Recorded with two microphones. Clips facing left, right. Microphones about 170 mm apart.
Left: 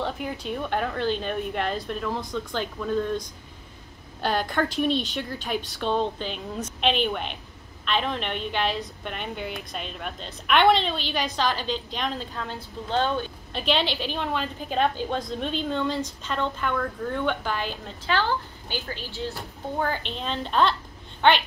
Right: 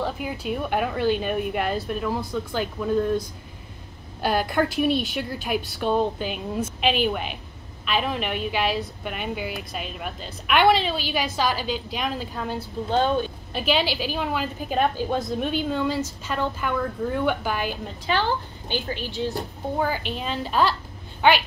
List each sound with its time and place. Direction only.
0.0 s a woman's voice: 5° right (ahead or behind)